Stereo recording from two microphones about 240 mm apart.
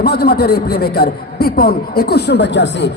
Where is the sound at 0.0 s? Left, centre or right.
Left.